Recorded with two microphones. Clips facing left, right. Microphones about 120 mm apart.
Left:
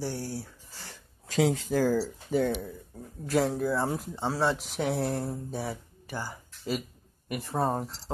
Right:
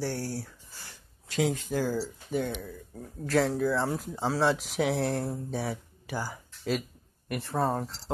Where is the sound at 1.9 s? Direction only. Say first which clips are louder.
Left 4 dB; 50° left (ahead or behind).